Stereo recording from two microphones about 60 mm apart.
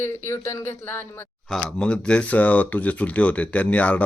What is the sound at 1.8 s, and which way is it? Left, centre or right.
Speech, centre.